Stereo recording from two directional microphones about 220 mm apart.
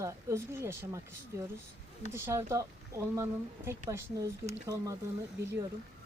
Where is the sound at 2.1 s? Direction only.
10° right (ahead or behind).